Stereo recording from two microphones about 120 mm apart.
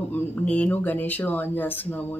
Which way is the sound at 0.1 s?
15° left (ahead or behind).